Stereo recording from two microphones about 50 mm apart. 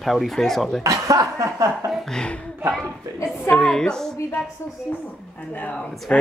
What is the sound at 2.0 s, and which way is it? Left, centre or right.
Speech, centre.